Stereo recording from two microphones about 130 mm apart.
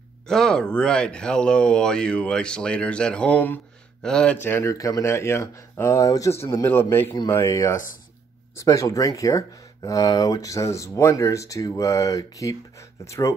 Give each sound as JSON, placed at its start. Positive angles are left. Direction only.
{"t": 0.3, "sound": "speech", "side_deg": 5}